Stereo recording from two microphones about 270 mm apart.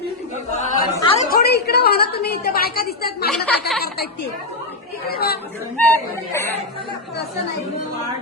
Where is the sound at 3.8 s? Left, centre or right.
Left.